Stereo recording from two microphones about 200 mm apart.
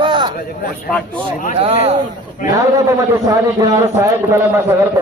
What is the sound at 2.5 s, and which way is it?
A man's voice, 15° right (ahead or behind).